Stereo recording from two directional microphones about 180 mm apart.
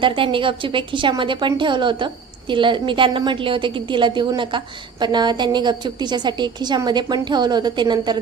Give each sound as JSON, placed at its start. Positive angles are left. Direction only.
{"t": 0.0, "sound": "a woman's voice", "side_deg": -30}